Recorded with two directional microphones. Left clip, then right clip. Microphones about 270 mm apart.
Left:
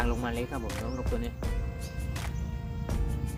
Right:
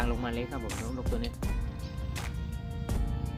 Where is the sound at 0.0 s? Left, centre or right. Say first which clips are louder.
Left 1 dB; centre.